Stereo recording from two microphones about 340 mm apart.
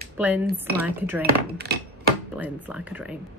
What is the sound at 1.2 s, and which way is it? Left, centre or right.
Speech, right.